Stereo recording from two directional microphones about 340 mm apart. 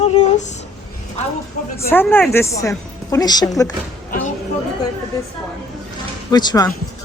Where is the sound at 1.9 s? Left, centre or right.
Centre.